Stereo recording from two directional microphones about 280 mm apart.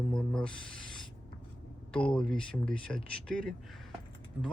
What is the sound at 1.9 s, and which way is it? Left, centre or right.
Speech, centre.